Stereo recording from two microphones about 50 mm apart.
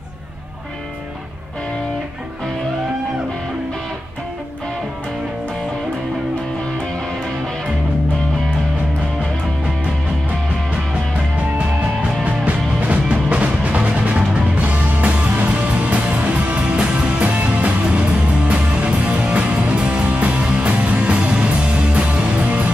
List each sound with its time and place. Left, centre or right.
11.5 s music: right